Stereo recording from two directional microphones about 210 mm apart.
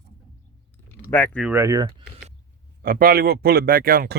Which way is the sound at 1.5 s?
10° right (ahead or behind).